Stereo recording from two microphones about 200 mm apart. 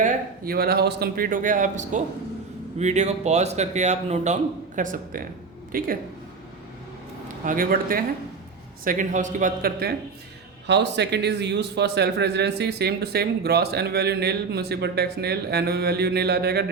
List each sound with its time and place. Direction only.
0.0 s speech: 50° right (ahead or behind)
7.4 s speech: 45° right (ahead or behind)
10.7 s a man's voice: 60° right (ahead or behind)